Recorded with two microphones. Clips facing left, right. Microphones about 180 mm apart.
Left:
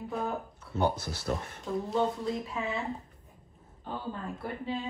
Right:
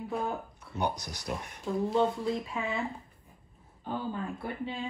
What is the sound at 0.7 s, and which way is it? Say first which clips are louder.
Speech: left 3 dB; 15° right (ahead or behind).